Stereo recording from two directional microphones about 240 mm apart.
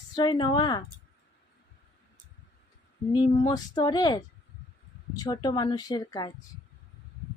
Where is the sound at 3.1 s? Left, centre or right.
Centre.